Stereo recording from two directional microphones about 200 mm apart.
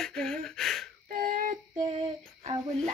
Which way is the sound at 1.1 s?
45° right (ahead or behind).